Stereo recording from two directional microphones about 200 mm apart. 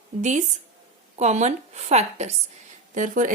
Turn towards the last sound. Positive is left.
turn(degrees=-40)  # may be behind; listen again after turning